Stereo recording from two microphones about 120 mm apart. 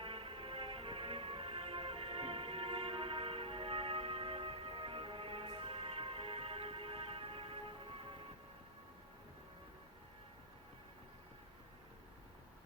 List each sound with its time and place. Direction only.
0.0 s music: 50° right (ahead or behind)